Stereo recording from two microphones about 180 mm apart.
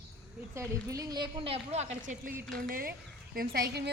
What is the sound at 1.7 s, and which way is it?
Speech, 40° right (ahead or behind).